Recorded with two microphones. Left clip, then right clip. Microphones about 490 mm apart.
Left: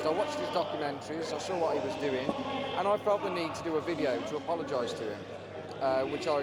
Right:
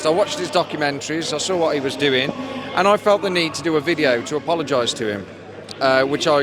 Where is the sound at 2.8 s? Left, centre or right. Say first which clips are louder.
Right 14 dB; right.